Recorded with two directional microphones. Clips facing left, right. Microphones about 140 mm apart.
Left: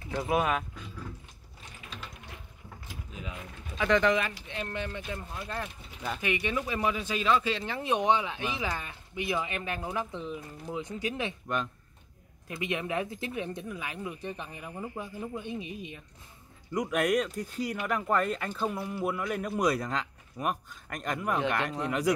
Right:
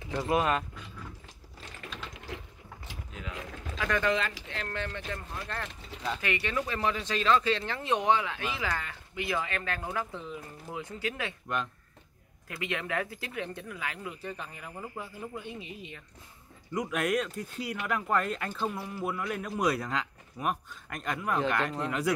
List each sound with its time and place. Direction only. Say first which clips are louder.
0.1 s speech: even; centre (ahead or behind)
2.1 s a sound: right 6 dB; 90° right
3.1 s mechanisms: left 1 dB; 20° left (ahead or behind)
3.3 s speech: right 2 dB; 90° right
3.9 s speech: left 4 dB; 15° left (ahead or behind)
11.4 s speech: right 1 dB; centre (ahead or behind)
12.4 s speech: left 2 dB; 20° left (ahead or behind)
16.7 s speech: left 2 dB; 5° right (ahead or behind)